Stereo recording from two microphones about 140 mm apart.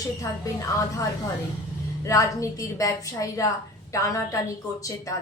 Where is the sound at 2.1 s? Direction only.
25° left (ahead or behind).